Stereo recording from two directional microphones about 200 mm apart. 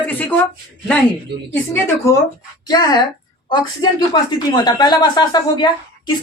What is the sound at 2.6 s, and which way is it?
Speech, 20° left (ahead or behind).